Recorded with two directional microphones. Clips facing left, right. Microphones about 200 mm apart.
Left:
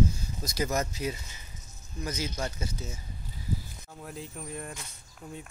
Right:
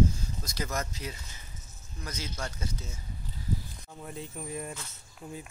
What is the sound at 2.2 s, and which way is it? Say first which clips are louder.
Speech: left 2 dB; 15° left (ahead or behind).